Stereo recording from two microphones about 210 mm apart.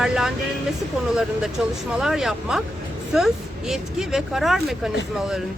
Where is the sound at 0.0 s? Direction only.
Centre (ahead or behind).